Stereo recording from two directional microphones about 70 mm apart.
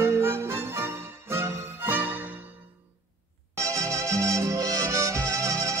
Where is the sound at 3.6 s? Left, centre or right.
Right.